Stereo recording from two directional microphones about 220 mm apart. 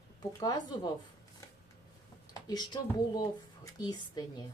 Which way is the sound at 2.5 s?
20° left (ahead or behind).